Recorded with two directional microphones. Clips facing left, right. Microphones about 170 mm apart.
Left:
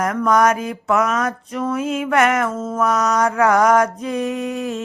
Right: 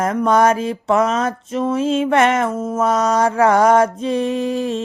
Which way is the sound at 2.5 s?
10° right (ahead or behind).